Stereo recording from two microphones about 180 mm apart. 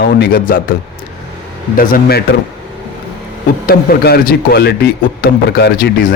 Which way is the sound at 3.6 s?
60° left (ahead or behind).